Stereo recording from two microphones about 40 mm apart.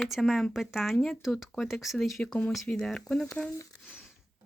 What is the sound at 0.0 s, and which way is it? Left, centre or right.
Speech, centre.